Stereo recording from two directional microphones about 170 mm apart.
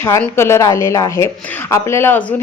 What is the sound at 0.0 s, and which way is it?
Speech, 15° left (ahead or behind).